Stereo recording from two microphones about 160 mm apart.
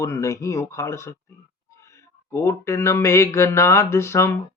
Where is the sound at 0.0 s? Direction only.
20° left (ahead or behind).